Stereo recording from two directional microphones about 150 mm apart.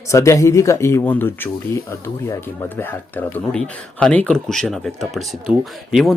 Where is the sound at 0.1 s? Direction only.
20° left (ahead or behind).